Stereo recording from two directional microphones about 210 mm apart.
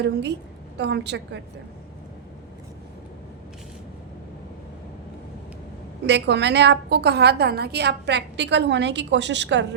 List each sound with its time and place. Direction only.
0.0 s a woman's voice: 55° right (ahead or behind)
6.1 s a woman's voice: 55° right (ahead or behind)